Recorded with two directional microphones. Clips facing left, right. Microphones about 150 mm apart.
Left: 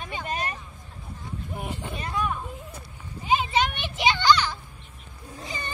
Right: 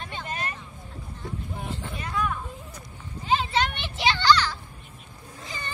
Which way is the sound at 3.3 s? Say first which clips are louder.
Left 1 dB; 15° left (ahead or behind).